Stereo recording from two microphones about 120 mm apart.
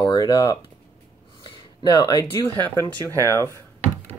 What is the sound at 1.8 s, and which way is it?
Speech, 35° left (ahead or behind).